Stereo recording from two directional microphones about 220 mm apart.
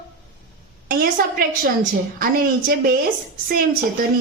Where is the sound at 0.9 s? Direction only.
40° right (ahead or behind).